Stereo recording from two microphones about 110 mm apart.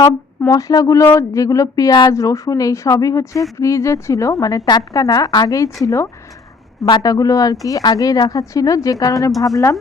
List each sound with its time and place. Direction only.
0.0 s speech: 30° left (ahead or behind)
2.1 s a woman's voice: 30° left (ahead or behind)